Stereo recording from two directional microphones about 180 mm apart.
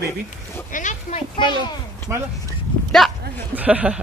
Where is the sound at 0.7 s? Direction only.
45° left (ahead or behind).